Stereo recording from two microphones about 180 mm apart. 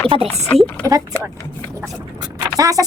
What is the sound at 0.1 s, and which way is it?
Speech, 35° right (ahead or behind).